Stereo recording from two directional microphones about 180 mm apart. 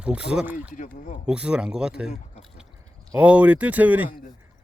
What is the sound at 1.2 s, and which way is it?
Speech, 5° right (ahead or behind).